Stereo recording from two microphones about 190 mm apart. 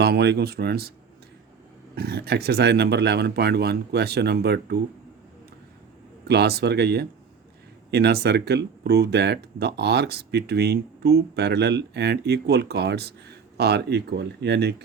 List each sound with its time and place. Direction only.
0.0 s speech: 60° right (ahead or behind)
2.0 s speech: 55° right (ahead or behind)
6.2 s speech: 60° right (ahead or behind)